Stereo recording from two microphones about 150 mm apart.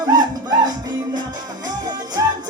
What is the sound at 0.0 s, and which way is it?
Music, 25° right (ahead or behind).